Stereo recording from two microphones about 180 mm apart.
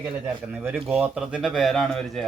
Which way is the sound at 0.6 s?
5° right (ahead or behind).